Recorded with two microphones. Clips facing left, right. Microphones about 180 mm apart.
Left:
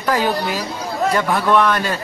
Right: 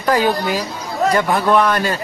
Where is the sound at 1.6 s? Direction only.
5° right (ahead or behind).